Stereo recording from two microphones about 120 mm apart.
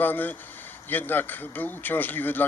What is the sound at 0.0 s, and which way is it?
Speech, 15° left (ahead or behind).